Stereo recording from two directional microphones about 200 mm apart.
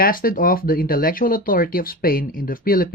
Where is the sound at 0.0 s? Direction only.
45° left (ahead or behind).